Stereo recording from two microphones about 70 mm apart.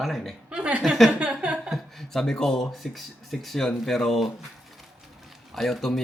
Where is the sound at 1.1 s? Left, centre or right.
Centre.